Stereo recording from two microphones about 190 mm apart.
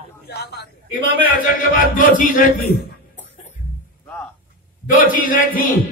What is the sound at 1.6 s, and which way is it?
Speech, 45° left (ahead or behind).